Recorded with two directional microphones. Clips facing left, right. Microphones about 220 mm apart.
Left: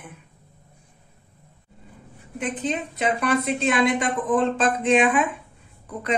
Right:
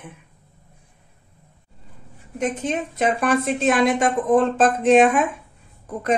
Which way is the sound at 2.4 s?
45° right (ahead or behind).